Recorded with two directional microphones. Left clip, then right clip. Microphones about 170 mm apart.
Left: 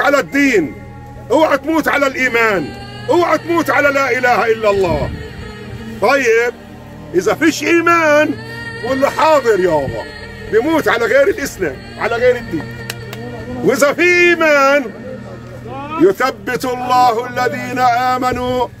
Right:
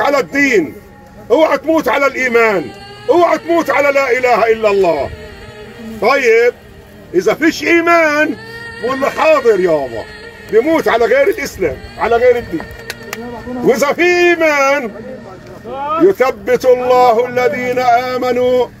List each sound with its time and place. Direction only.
0.0 s a man's voice: 20° left (ahead or behind)
5.9 s a man's voice: 20° left (ahead or behind)
13.7 s speech: 20° left (ahead or behind)
16.1 s speech: 20° left (ahead or behind)